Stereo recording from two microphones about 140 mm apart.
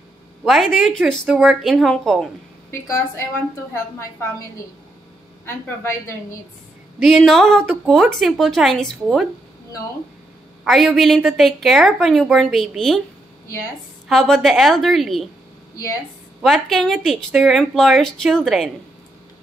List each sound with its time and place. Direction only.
0.4 s a sound: centre (ahead or behind)
0.7 s a woman's voice: centre (ahead or behind)
2.7 s a woman's voice: 20° left (ahead or behind)
5.4 s a woman's voice: 20° left (ahead or behind)
7.0 s a woman's voice: centre (ahead or behind)
10.6 s a woman's voice: centre (ahead or behind)
14.0 s a woman's voice: centre (ahead or behind)
16.4 s a woman's voice: centre (ahead or behind)